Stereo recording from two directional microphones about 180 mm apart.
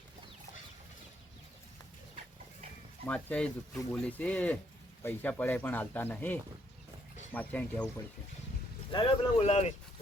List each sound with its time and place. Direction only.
3.1 s speech: 5° left (ahead or behind)
8.9 s speech: 30° left (ahead or behind)